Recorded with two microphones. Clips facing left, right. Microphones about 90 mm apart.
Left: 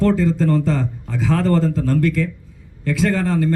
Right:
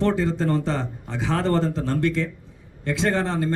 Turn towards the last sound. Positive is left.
turn(degrees=-25)  # may be behind; listen again after turning